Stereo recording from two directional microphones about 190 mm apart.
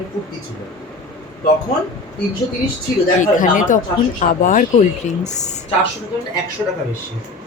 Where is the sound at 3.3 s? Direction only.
45° left (ahead or behind).